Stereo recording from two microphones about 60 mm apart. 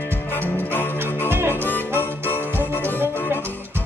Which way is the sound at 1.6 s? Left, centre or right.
Left.